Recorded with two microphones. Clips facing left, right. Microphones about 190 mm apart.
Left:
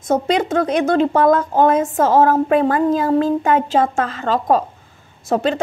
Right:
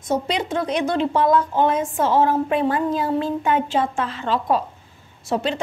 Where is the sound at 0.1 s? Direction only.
50° left (ahead or behind).